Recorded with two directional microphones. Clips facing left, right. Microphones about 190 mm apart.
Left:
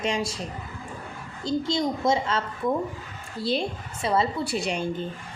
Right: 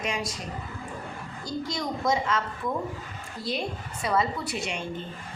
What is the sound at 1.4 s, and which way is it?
A woman's voice, 25° left (ahead or behind).